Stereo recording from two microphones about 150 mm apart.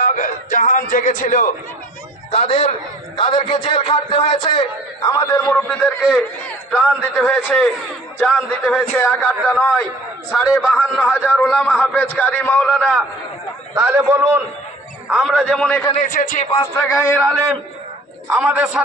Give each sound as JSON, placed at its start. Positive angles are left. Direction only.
{"t": 0.0, "sound": "a sound", "side_deg": 60}
{"t": 2.3, "sound": "a man's voice", "side_deg": 45}
{"t": 3.2, "sound": "a man's voice", "side_deg": 35}
{"t": 5.5, "sound": "a man's voice", "side_deg": 10}
{"t": 7.4, "sound": "a man's voice", "side_deg": 0}
{"t": 10.3, "sound": "a man's voice", "side_deg": -5}
{"t": 11.4, "sound": "a man's voice", "side_deg": 10}
{"t": 13.7, "sound": "a man's voice", "side_deg": -10}
{"t": 15.0, "sound": "a man's voice", "side_deg": 0}
{"t": 15.9, "sound": "a man's voice", "side_deg": 60}
{"t": 16.8, "sound": "a man's voice", "side_deg": 10}
{"t": 18.3, "sound": "a man's voice", "side_deg": -5}